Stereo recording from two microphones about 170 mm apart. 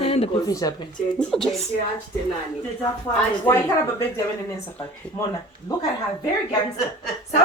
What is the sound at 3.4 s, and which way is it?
Speech, 15° left (ahead or behind).